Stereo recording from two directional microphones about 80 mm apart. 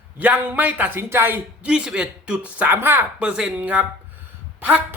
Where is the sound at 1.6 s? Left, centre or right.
Centre.